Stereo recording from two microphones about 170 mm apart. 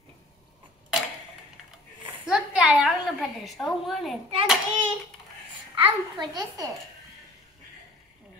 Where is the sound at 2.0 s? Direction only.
5° right (ahead or behind).